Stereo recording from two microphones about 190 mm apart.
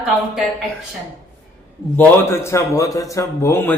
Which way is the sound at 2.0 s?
15° left (ahead or behind).